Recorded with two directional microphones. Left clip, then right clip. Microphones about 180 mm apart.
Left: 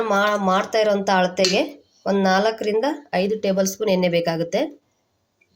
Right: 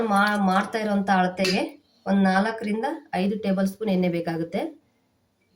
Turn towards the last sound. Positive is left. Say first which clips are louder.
# left 7 dB
turn(degrees=45)  # may be behind; listen again after turning